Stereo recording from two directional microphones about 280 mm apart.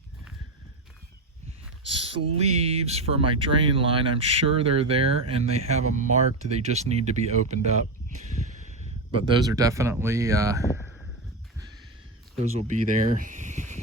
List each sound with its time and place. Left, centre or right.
2.1 s speech: right
9.1 s speech: centre
12.4 s speech: right